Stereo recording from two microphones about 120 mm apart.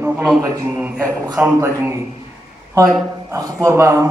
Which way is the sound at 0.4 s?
15° right (ahead or behind).